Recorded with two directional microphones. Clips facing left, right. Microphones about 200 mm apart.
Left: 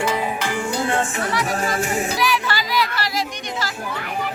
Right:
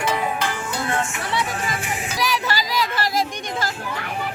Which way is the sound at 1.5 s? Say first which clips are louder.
Left 5 dB; 45° left (ahead or behind).